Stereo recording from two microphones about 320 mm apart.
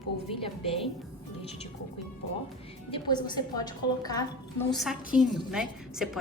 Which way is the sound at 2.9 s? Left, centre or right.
Centre.